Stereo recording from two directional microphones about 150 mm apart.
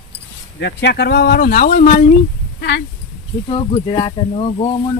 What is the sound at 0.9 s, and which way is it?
Speech, 90° left.